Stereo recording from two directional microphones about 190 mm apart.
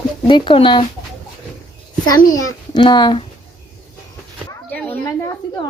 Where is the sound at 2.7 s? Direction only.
20° left (ahead or behind).